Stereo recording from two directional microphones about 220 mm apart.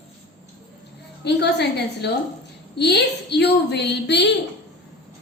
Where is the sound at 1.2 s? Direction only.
50° left (ahead or behind).